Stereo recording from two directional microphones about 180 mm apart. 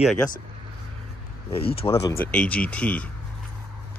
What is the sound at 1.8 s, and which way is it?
Speech, 20° left (ahead or behind).